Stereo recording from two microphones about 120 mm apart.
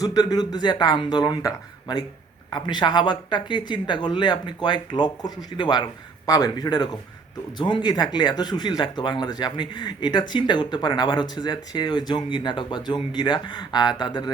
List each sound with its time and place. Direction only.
0.0 s speech: 30° left (ahead or behind)